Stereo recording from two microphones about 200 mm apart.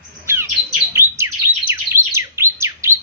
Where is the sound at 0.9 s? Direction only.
15° right (ahead or behind).